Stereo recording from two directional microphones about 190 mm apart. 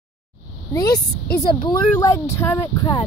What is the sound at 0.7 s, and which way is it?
Speech, 20° left (ahead or behind).